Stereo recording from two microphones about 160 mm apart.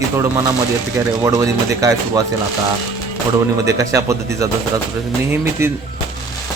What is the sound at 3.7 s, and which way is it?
Speech, 20° right (ahead or behind).